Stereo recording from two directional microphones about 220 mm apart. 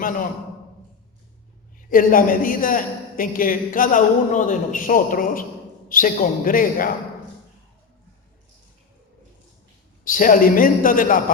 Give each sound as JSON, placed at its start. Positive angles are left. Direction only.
{"t": 1.9, "sound": "a man's voice", "side_deg": 40}
{"t": 10.0, "sound": "a man's voice", "side_deg": 40}